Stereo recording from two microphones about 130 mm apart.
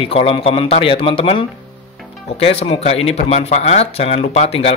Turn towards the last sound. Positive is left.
turn(degrees=55)  # may be behind; listen again after turning